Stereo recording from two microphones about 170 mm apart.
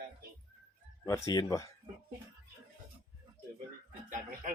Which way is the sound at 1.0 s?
20° left (ahead or behind).